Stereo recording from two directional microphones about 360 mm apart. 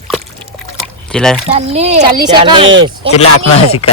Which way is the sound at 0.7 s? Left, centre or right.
Centre.